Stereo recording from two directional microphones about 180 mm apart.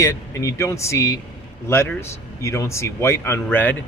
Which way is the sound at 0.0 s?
15° left (ahead or behind).